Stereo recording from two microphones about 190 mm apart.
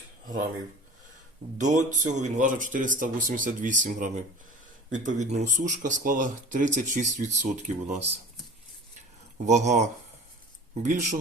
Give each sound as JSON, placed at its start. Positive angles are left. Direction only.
{"t": 1.5, "sound": "speech", "side_deg": -40}
{"t": 9.5, "sound": "speech", "side_deg": -35}